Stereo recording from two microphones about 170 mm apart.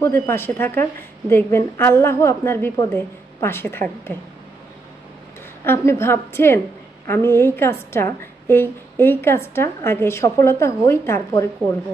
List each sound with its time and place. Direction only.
0.0 s a woman's voice: 15° left (ahead or behind)
5.7 s a woman's voice: 15° left (ahead or behind)